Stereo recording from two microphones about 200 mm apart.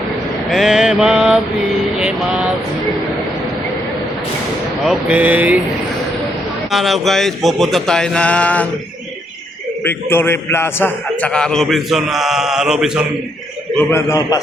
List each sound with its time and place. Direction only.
0.5 s mantra: centre (ahead or behind)
2.0 s a man's voice: 5° right (ahead or behind)
4.9 s speech: 5° right (ahead or behind)
6.7 s a man's voice: centre (ahead or behind)
9.8 s a man's voice: 10° left (ahead or behind)
13.7 s a man's voice: 15° left (ahead or behind)